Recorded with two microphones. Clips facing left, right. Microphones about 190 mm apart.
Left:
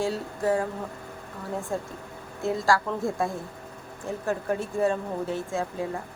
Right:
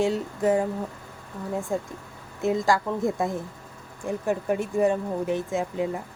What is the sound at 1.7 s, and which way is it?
Speech, 15° right (ahead or behind).